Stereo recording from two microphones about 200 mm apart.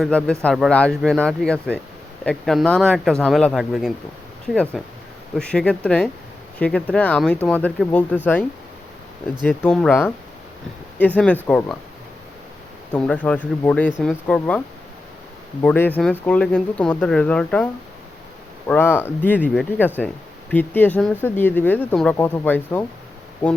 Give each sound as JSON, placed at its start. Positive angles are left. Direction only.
{"t": 0.0, "sound": "speech", "side_deg": 5}
{"t": 9.5, "sound": "speech", "side_deg": 5}
{"t": 12.9, "sound": "speech", "side_deg": 5}
{"t": 15.6, "sound": "speech", "side_deg": 10}
{"t": 18.7, "sound": "speech", "side_deg": 10}